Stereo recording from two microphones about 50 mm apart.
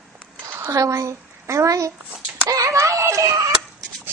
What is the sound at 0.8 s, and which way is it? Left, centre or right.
Speech, right.